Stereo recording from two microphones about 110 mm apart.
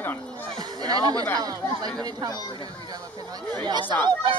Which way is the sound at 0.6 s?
40° right (ahead or behind).